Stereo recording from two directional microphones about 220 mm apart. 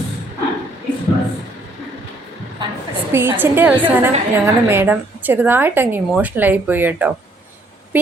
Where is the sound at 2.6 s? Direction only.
20° right (ahead or behind).